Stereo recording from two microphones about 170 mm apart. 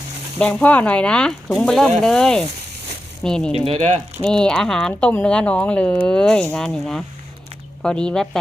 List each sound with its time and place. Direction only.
0.3 s speech: 10° left (ahead or behind)
3.5 s speech: 35° right (ahead or behind)
4.2 s speech: 5° left (ahead or behind)